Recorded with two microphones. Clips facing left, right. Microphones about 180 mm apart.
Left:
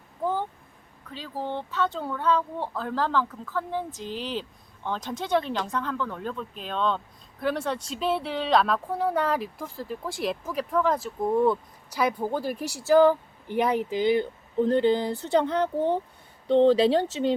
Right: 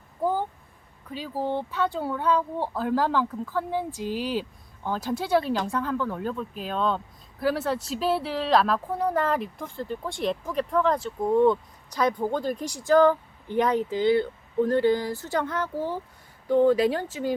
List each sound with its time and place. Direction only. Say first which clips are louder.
0.2 s vehicle: right 2 dB; 10° right (ahead or behind)
1.1 s speech: right 4 dB; 10° right (ahead or behind); by 17.1 s 30° left (ahead or behind)